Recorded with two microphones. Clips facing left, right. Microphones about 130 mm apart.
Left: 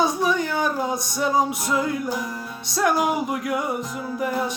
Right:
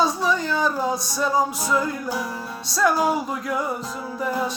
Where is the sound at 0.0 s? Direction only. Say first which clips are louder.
Even; 20° left (ahead or behind).